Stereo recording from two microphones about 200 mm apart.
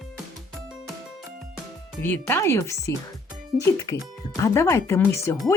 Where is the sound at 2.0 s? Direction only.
10° left (ahead or behind).